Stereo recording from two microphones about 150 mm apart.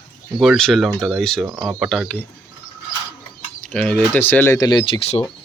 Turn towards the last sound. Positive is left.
turn(degrees=40)  # may be behind; listen again after turning